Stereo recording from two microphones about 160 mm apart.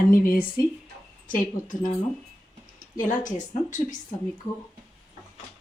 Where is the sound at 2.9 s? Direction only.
55° left (ahead or behind).